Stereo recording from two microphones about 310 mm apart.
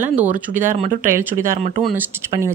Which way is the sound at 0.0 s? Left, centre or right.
Centre.